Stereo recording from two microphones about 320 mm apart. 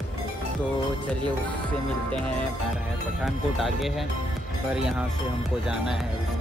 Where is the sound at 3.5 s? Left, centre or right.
Centre.